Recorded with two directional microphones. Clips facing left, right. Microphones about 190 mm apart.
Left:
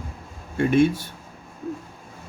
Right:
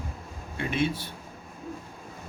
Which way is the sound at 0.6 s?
50° left (ahead or behind).